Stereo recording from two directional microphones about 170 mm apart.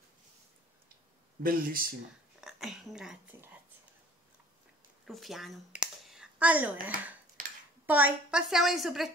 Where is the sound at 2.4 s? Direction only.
Centre (ahead or behind).